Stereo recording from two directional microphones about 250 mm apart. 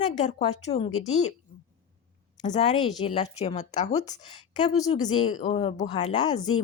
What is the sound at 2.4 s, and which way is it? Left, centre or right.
A woman's voice, left.